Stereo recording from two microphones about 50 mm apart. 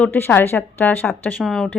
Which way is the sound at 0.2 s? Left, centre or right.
Left.